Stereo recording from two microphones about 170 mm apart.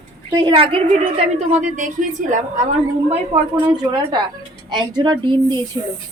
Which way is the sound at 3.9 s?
25° right (ahead or behind).